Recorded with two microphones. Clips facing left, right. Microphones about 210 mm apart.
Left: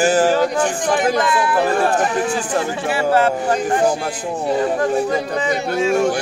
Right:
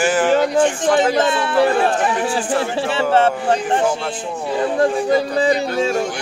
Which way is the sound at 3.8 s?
40° left (ahead or behind).